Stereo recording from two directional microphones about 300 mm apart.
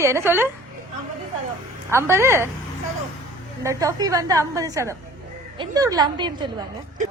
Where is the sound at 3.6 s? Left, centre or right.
Centre.